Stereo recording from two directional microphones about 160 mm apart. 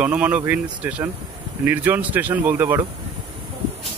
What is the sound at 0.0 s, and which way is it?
Speech, 10° right (ahead or behind).